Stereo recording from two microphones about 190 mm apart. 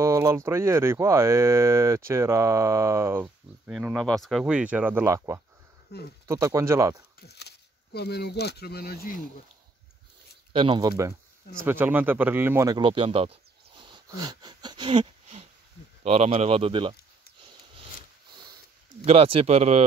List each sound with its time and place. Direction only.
0.0 s speech: 15° right (ahead or behind)
4.2 s speech: centre (ahead or behind); by 5.4 s 15° right (ahead or behind)
5.9 s speech: 55° left (ahead or behind)
6.2 s speech: 15° right (ahead or behind)
7.2 s speech: 60° left (ahead or behind)
10.5 s speech: 25° right (ahead or behind)
19.0 s speech: 30° right (ahead or behind)